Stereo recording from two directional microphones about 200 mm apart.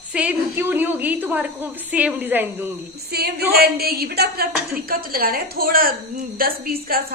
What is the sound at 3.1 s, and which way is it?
A woman's voice, 50° right (ahead or behind).